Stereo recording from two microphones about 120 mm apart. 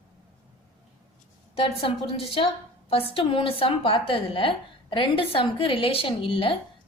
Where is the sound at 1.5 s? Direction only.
50° left (ahead or behind).